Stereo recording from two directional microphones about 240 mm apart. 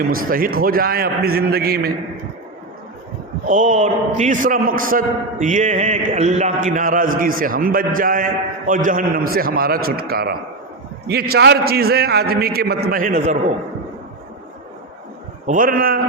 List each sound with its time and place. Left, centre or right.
0.1 s a man's voice: right
3.4 s a man's voice: right
15.4 s a man's voice: right